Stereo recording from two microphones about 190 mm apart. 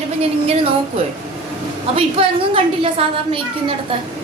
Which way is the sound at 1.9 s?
30° right (ahead or behind).